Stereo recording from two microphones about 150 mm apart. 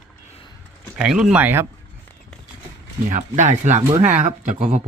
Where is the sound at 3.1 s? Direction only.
55° right (ahead or behind).